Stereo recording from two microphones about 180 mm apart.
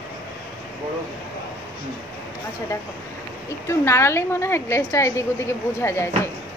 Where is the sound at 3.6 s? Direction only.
15° left (ahead or behind).